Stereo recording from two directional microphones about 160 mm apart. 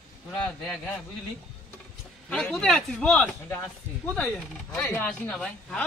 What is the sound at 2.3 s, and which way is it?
A man's voice, 5° left (ahead or behind).